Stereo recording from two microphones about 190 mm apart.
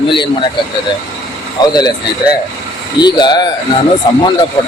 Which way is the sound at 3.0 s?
20° left (ahead or behind).